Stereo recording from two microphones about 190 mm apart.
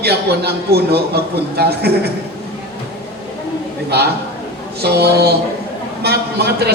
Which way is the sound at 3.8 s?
60° right (ahead or behind).